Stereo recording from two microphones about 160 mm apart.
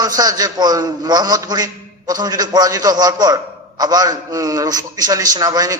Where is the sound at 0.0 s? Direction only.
25° right (ahead or behind).